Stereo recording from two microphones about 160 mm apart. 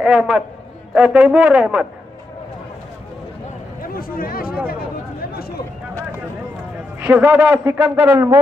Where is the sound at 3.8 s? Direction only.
65° left (ahead or behind).